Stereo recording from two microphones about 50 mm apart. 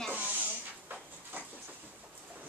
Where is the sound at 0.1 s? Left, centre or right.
Right.